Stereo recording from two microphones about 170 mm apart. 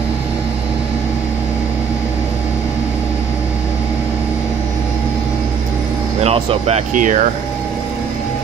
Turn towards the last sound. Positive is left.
turn(degrees=-50)  # may be behind; listen again after turning